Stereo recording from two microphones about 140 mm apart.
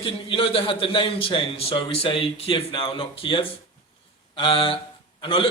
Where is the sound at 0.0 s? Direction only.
40° left (ahead or behind).